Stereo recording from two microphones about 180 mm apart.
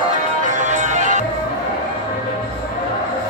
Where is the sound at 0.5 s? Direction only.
40° right (ahead or behind).